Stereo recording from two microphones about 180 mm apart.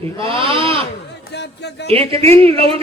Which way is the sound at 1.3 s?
70° left (ahead or behind).